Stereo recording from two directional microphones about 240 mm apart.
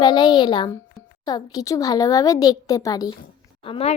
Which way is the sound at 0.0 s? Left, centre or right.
Centre.